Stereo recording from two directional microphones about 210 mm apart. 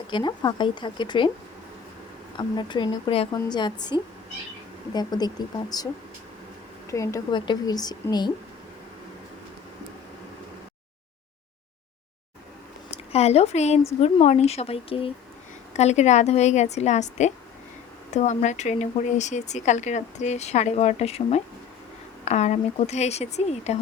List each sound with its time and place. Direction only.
0.1 s speech: 20° left (ahead or behind)
2.3 s speech: 20° left (ahead or behind)
6.9 s speech: 15° left (ahead or behind)
12.9 s speech: 30° left (ahead or behind)